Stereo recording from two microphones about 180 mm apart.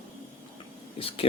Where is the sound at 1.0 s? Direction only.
30° left (ahead or behind).